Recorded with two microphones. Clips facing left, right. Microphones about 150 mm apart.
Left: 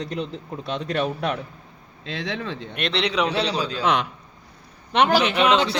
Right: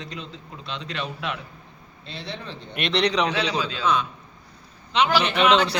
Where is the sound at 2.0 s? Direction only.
90° left.